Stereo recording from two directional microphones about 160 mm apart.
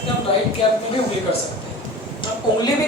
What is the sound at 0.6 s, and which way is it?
Speech, 30° left (ahead or behind).